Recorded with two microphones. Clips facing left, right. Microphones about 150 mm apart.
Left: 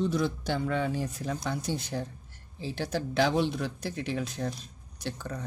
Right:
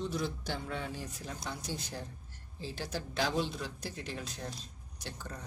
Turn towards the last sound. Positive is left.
turn(degrees=65)  # may be behind; listen again after turning